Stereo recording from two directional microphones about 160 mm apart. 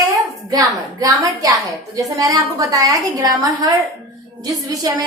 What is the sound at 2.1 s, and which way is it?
A woman's voice, 20° right (ahead or behind).